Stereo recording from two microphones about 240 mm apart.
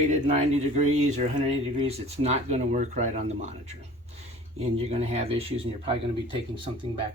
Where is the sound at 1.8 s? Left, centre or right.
Right.